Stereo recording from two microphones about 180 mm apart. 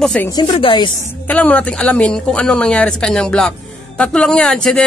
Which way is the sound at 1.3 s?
10° left (ahead or behind).